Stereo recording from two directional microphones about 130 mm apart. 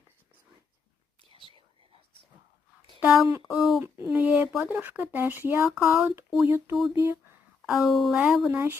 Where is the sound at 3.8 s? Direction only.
20° right (ahead or behind).